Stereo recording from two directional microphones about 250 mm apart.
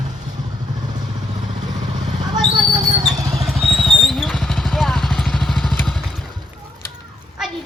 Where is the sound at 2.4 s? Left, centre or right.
Centre.